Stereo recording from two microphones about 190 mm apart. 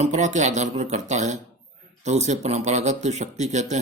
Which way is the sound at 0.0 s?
40° right (ahead or behind).